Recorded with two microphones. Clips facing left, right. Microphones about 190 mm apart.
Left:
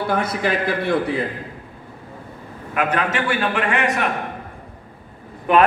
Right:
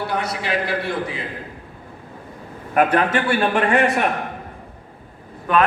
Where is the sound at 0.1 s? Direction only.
50° left (ahead or behind).